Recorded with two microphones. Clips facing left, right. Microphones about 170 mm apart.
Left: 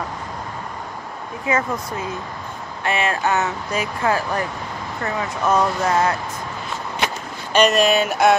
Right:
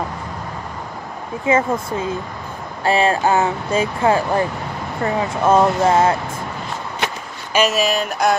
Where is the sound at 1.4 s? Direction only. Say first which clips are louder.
Right 5 dB; 25° right (ahead or behind).